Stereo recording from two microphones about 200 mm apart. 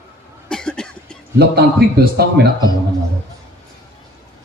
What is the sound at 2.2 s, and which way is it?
Speech, 50° right (ahead or behind).